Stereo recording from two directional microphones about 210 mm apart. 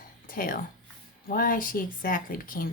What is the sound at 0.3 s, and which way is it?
Speech, 45° left (ahead or behind).